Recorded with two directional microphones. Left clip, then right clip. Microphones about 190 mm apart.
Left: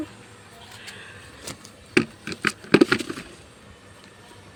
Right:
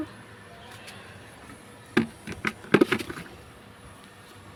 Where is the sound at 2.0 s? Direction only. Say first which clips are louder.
Left 5 dB; 35° left (ahead or behind).